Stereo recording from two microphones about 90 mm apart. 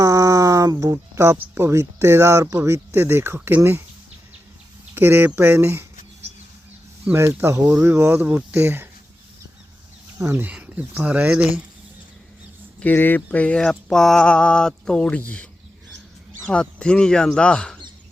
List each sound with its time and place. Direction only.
0.0 s speech: 40° right (ahead or behind)
4.9 s speech: 25° right (ahead or behind)
7.1 s speech: 25° right (ahead or behind)
10.2 s speech: 25° right (ahead or behind)
12.8 s a sound: 20° left (ahead or behind)
16.5 s a sound: 10° left (ahead or behind)